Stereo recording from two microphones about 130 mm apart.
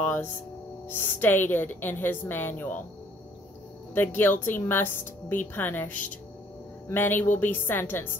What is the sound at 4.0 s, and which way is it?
Speech, 15° left (ahead or behind).